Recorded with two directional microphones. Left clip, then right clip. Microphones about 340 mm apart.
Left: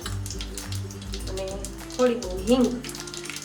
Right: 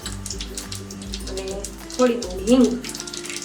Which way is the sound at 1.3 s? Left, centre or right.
Left.